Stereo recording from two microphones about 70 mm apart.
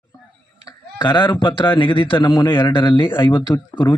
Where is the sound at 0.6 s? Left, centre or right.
Left.